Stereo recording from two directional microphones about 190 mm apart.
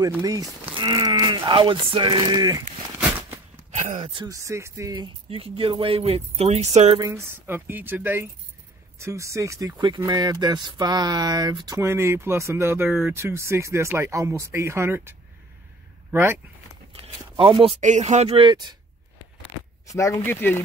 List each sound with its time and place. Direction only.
0.2 s speech: 20° right (ahead or behind)
3.0 s a sound: 10° right (ahead or behind)
3.7 s speech: 40° right (ahead or behind)
4.1 s speech: 20° right (ahead or behind)
7.0 s speech: 15° right (ahead or behind)
16.9 s speech: 30° right (ahead or behind)
19.9 s speech: 15° left (ahead or behind)